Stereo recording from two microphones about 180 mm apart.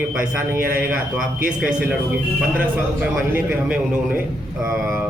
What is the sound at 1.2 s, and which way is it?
Speech, 50° right (ahead or behind).